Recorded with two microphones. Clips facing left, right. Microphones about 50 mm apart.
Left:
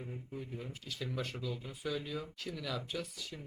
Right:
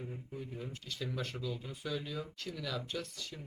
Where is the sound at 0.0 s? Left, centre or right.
Centre.